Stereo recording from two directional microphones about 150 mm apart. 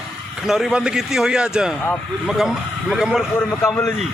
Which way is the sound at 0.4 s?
Centre (ahead or behind).